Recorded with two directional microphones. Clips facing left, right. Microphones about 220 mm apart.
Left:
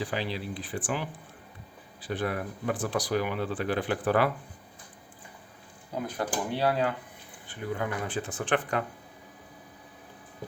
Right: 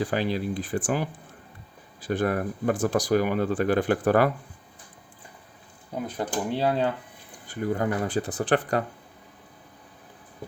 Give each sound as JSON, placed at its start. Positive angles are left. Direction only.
{"t": 0.0, "sound": "speech", "side_deg": -45}
{"t": 6.1, "sound": "speech", "side_deg": -20}
{"t": 7.4, "sound": "speech", "side_deg": -45}